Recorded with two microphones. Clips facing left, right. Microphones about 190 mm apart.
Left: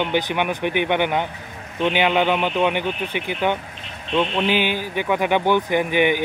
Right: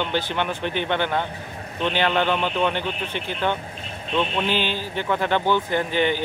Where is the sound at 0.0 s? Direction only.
15° left (ahead or behind).